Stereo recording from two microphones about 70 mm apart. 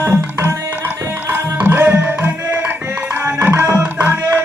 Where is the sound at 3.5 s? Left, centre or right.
Right.